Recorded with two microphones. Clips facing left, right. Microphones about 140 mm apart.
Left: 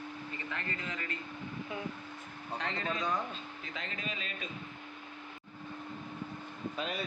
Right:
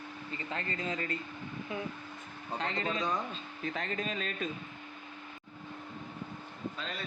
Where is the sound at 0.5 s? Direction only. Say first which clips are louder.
Right 6 dB; 30° right (ahead or behind).